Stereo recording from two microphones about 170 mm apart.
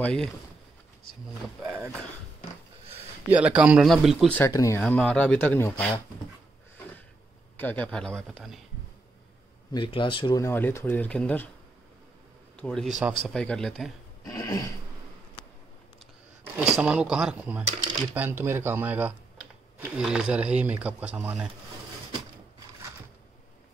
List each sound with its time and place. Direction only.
0.0 s speech: 5° left (ahead or behind)
1.6 s a sound: 10° right (ahead or behind)
3.3 s speech: 5° right (ahead or behind)
4.5 s speech: 20° left (ahead or behind)
4.8 s speech: 5° left (ahead or behind)
7.5 s speech: 10° left (ahead or behind)
9.7 s speech: 30° left (ahead or behind)
10.4 s speech: 15° left (ahead or behind)
12.5 s a man's voice: 5° left (ahead or behind)
14.2 s throat clearing: 20° left (ahead or behind)
16.5 s speech: 5° right (ahead or behind)